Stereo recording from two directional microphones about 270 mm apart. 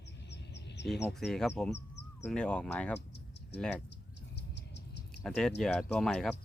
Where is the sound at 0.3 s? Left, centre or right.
Left.